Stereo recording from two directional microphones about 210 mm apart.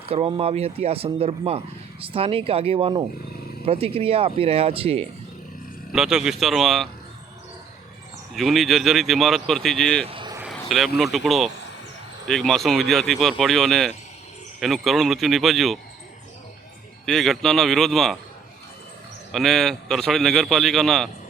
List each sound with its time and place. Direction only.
0.0 s speech: 25° right (ahead or behind)
5.9 s a man's voice: centre (ahead or behind)
8.4 s a man's voice: centre (ahead or behind)
10.1 s a sound: 25° right (ahead or behind)
10.5 s a man's voice: centre (ahead or behind)
17.1 s a man's voice: centre (ahead or behind)
19.3 s a man's voice: centre (ahead or behind)